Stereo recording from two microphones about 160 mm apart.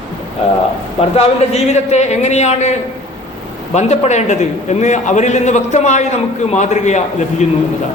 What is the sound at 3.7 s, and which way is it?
A man's voice, 45° left (ahead or behind).